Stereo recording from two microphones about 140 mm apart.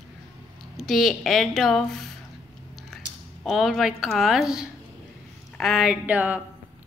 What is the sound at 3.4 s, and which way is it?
A woman's voice, centre (ahead or behind).